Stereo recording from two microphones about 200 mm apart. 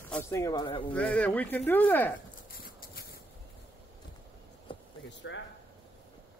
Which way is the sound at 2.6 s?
50° left (ahead or behind).